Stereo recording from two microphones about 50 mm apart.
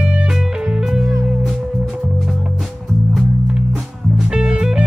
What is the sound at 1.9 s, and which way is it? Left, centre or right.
Music, centre.